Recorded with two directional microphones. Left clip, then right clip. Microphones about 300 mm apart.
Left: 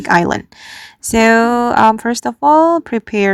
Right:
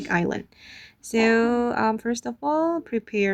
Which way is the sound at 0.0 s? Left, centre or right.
Left.